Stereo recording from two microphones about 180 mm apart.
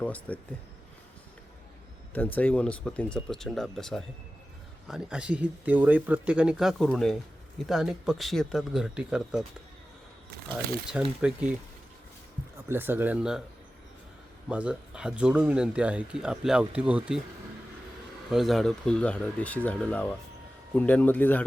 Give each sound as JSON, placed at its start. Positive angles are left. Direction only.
{"t": 0.0, "sound": "speech", "side_deg": 10}
{"t": 2.1, "sound": "speech", "side_deg": 10}
{"t": 11.2, "sound": "speech", "side_deg": -5}
{"t": 12.6, "sound": "speech", "side_deg": -10}
{"t": 14.5, "sound": "speech", "side_deg": -5}
{"t": 18.3, "sound": "speech", "side_deg": 0}